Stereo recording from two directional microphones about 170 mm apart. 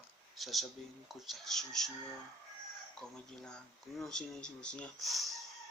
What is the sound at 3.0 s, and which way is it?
Speech, 5° left (ahead or behind).